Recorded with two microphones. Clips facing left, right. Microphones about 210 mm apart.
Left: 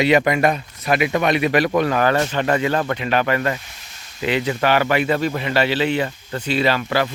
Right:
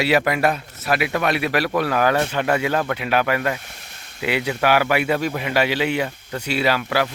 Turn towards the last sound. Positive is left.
turn(degrees=-10)  # may be behind; listen again after turning